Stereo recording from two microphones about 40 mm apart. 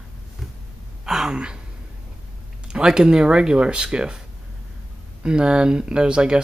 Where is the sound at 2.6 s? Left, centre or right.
Right.